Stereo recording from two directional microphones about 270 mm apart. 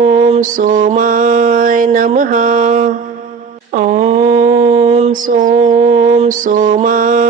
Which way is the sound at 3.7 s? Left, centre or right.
Right.